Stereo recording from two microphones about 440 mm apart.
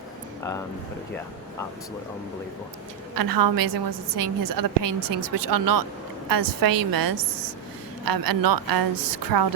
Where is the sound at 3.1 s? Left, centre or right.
Right.